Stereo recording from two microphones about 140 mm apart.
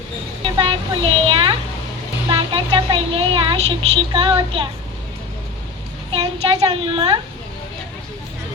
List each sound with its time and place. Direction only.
0.4 s speech: 40° right (ahead or behind)
6.1 s a child's voice: 45° right (ahead or behind)